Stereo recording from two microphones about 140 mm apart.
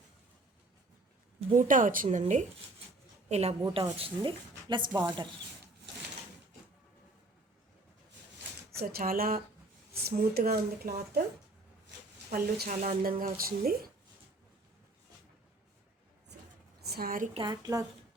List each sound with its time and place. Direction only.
1.5 s a woman's voice: 70° right (ahead or behind); by 3.5 s 50° right (ahead or behind)
3.9 s speech: 40° right (ahead or behind)
8.7 s speech: 90° right
12.3 s speech: 80° right
17.0 s speech: 90° right
17.3 s a woman's voice: 30° right (ahead or behind)